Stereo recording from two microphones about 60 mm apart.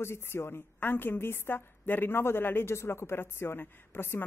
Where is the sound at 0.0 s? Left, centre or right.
Left.